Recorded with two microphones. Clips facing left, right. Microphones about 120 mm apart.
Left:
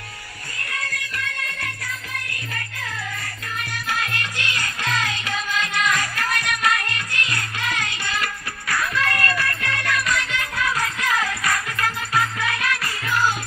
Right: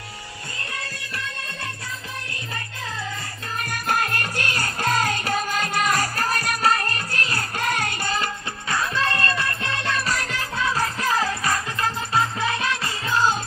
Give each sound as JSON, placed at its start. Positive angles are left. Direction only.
{"t": 0.7, "sound": "music", "side_deg": -30}
{"t": 3.6, "sound": "music", "side_deg": -45}